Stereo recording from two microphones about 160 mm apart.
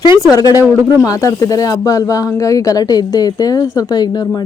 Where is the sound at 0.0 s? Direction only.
30° left (ahead or behind).